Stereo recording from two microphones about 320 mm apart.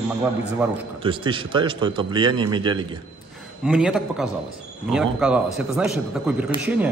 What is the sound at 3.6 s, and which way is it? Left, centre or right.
A man's voice, centre.